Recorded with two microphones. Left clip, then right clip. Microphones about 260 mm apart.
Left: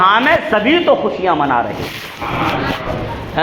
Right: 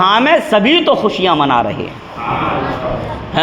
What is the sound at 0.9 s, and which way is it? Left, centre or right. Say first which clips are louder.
Speech: right 1 dB; right.